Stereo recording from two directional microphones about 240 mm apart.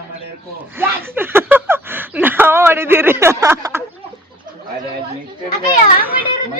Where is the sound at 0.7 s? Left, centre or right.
Centre.